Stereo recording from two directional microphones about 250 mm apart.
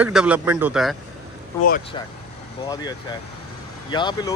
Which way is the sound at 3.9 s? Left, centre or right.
Centre.